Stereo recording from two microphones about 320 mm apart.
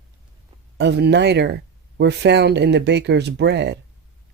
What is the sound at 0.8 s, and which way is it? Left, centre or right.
Speech, right.